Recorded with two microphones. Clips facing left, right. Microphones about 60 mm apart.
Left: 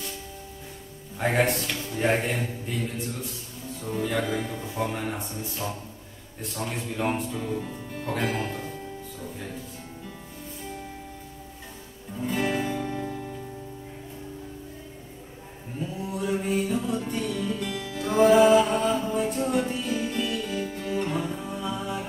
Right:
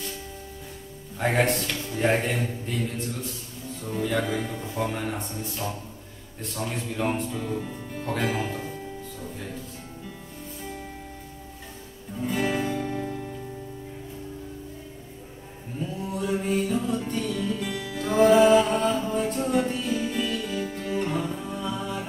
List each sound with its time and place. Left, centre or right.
1.1 s a man's voice: centre
3.8 s a man's voice: centre
6.5 s a man's voice: centre
7.4 s speech: centre
12.2 s music: centre
16.1 s music: centre